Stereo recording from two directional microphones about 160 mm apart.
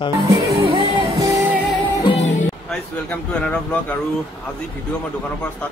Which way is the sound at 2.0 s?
35° left (ahead or behind).